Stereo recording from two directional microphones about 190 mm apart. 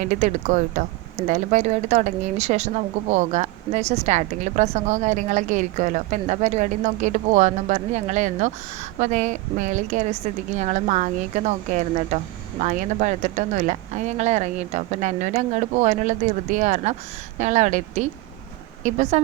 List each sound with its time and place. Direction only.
0.0 s speech: 40° right (ahead or behind)